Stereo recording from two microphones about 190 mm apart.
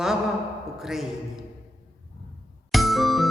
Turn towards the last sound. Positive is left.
turn(degrees=0)  # may be behind; listen again after turning